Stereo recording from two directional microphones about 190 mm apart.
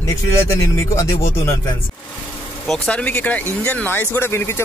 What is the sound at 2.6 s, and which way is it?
Speech, 5° left (ahead or behind).